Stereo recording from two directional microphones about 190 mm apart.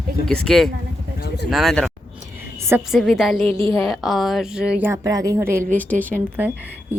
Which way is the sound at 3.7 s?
Centre (ahead or behind).